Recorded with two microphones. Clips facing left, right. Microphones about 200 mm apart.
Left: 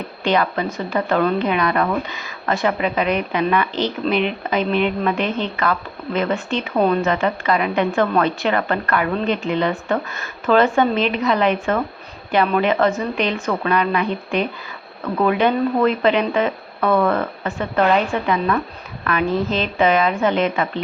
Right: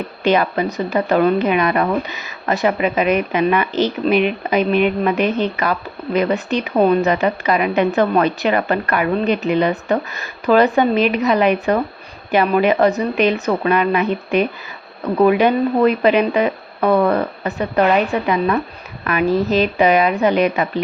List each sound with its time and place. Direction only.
0.3 s speech: 20° right (ahead or behind)
3.7 s speech: 20° left (ahead or behind)
4.0 s a woman's voice: 15° right (ahead or behind)